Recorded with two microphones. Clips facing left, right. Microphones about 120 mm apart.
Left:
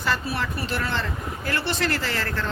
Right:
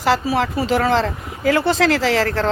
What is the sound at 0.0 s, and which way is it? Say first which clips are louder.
Speech: right 9 dB; 90° right.